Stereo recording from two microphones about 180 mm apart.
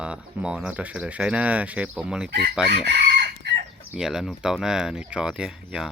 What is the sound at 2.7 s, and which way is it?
Chicken, 65° right (ahead or behind).